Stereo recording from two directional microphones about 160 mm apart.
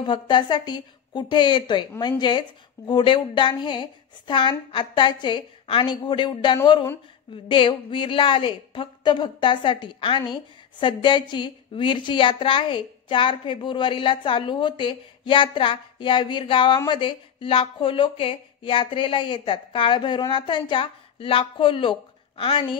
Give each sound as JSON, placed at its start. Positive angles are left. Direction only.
{"t": 0.0, "sound": "a woman's voice", "side_deg": 30}